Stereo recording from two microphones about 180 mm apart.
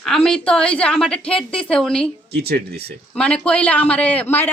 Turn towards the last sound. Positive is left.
turn(degrees=10)  # may be behind; listen again after turning